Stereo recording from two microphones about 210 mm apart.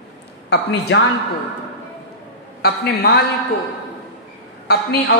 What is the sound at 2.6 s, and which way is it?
Speech, 50° left (ahead or behind).